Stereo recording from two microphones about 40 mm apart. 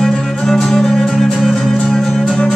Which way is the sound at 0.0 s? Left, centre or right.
Centre.